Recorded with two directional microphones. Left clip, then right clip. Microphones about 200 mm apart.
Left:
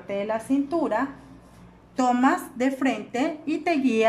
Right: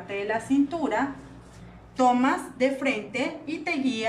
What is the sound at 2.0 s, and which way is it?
A woman's voice, 35° left (ahead or behind).